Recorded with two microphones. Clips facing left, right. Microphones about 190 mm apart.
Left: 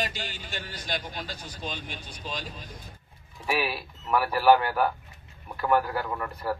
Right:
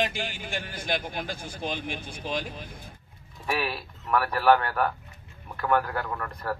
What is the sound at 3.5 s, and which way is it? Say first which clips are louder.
A man's voice: left 1 dB; 5° left (ahead or behind).